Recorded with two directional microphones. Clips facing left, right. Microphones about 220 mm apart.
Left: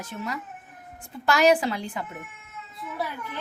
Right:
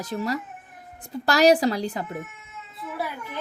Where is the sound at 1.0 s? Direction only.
40° right (ahead or behind).